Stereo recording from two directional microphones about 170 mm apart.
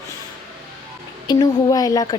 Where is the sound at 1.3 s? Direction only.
20° left (ahead or behind).